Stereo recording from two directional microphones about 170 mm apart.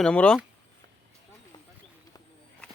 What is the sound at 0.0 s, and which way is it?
Speech, 5° left (ahead or behind).